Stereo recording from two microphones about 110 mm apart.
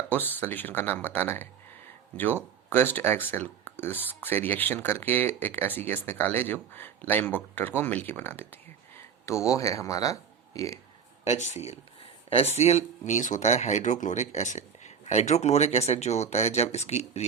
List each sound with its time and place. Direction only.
0.1 s speech: 20° left (ahead or behind)
11.3 s speech: 90° left
12.3 s speech: 70° left (ahead or behind); by 17.2 s 85° left